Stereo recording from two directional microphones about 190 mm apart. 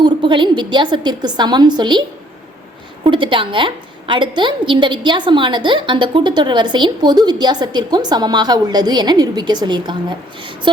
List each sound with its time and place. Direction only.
0.0 s a woman's voice: 25° right (ahead or behind)